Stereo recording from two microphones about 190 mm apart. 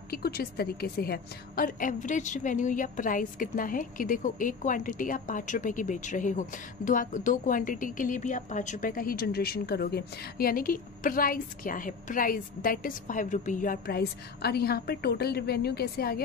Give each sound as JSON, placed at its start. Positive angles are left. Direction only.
{"t": 0.1, "sound": "a woman's voice", "side_deg": 55}